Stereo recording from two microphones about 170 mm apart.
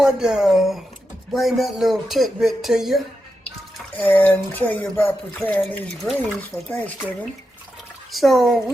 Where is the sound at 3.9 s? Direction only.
10° left (ahead or behind).